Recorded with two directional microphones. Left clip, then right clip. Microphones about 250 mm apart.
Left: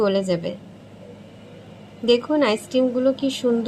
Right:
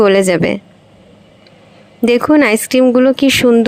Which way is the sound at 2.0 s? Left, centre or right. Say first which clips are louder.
Right 8 dB; right.